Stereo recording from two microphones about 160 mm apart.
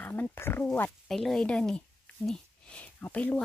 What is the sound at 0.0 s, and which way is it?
Speech, 10° left (ahead or behind).